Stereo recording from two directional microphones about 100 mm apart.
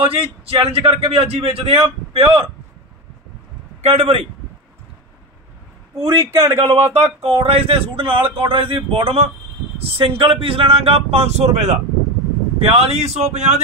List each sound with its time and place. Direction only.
0.0 s speech: 65° right (ahead or behind)
3.8 s speech: 90° right
5.9 s a man's voice: 30° right (ahead or behind)
6.7 s speech: 90° right